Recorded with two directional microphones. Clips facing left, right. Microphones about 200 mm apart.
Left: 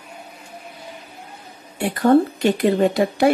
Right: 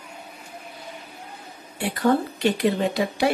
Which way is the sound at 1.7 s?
50° left (ahead or behind).